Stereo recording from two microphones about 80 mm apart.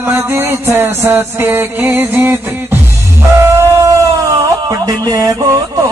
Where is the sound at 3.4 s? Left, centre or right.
Right.